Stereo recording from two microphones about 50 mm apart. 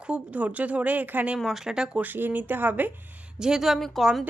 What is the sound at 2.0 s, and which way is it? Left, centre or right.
Speech, right.